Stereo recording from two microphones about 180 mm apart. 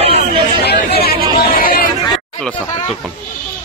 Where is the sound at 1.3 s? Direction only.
55° left (ahead or behind).